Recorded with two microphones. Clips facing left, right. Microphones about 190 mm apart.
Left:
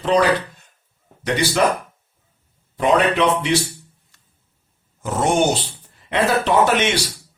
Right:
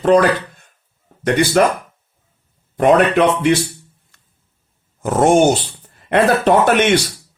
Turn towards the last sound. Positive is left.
turn(degrees=-55)  # may be behind; listen again after turning